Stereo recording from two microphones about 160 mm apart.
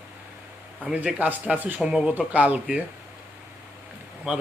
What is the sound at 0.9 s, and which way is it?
Speech, 10° right (ahead or behind).